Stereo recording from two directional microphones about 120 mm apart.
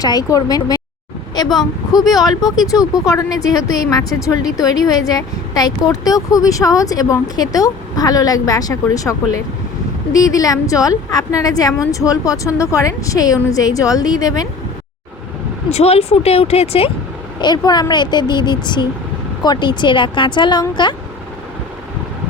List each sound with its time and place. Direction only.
0.0 s speech: 30° left (ahead or behind)
15.7 s speech: 60° left (ahead or behind)
17.4 s speech: 35° left (ahead or behind)